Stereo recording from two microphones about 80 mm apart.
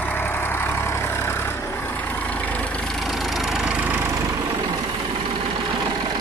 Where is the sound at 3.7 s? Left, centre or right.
Right.